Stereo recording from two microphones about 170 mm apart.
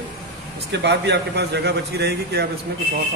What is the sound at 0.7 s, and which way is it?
A man's voice, 85° right.